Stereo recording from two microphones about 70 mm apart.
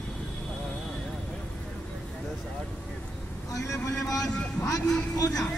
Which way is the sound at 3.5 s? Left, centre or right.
Left.